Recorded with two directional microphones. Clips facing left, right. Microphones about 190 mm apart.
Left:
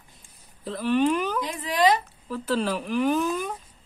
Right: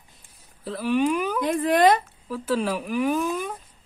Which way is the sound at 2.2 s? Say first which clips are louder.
Right 1 dB; 5° right (ahead or behind).